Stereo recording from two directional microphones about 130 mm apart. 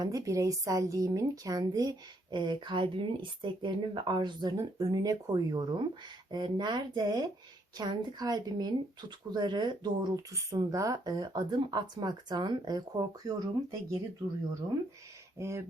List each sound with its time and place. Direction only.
0.0 s speech: 25° right (ahead or behind)
15.4 s speech: 20° right (ahead or behind)